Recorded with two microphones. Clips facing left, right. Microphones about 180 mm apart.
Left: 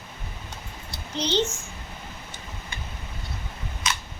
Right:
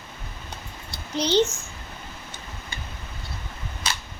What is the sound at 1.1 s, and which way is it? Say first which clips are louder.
Speech: right 4 dB; 10° right (ahead or behind).